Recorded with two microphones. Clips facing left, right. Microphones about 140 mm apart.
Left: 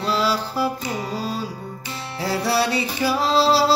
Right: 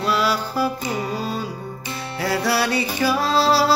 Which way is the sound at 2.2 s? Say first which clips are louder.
Even; 25° left (ahead or behind).